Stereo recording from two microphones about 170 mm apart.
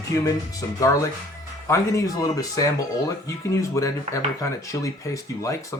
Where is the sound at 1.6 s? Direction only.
20° left (ahead or behind).